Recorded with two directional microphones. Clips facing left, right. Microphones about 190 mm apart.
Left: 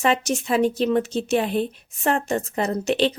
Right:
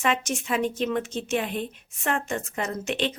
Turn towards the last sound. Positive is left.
turn(degrees=35)  # may be behind; listen again after turning